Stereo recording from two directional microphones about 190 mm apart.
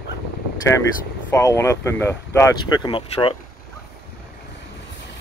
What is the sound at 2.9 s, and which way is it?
Speech, 25° left (ahead or behind).